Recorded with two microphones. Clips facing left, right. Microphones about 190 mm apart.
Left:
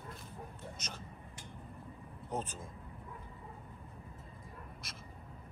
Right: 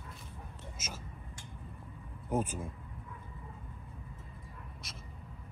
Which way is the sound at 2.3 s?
10° right (ahead or behind).